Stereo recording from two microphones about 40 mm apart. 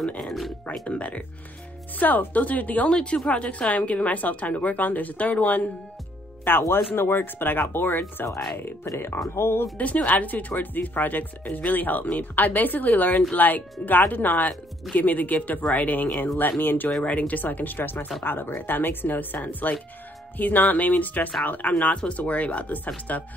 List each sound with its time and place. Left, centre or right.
0.8 s a woman's voice: left
2.0 s speech: left
2.9 s a woman's voice: left
6.4 s speech: left
8.6 s speech: left
9.8 s speech: left
16.3 s speech: left
17.0 s speech: left
18.2 s speech: left
21.9 s a woman's voice: left